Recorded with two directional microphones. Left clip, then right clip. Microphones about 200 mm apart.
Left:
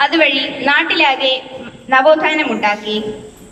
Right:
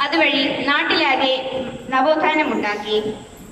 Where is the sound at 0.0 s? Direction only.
45° left (ahead or behind).